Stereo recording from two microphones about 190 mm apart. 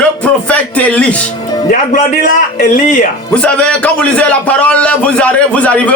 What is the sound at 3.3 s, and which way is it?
A man's voice, 5° left (ahead or behind).